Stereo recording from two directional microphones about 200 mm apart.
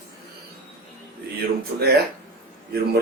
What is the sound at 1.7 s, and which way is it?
Speech, 50° right (ahead or behind).